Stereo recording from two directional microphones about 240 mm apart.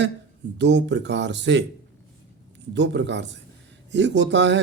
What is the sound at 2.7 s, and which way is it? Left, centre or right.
A man's voice, right.